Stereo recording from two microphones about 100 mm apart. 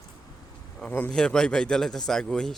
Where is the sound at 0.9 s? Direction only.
10° left (ahead or behind).